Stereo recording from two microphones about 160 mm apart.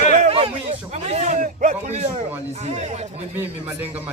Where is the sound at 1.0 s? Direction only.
45° right (ahead or behind).